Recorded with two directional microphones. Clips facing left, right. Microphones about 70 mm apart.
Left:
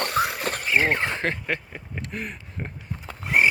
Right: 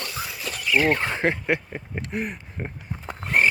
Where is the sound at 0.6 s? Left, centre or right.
Left.